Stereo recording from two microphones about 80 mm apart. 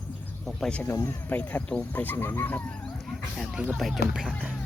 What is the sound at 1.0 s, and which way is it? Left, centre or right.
Speech, left.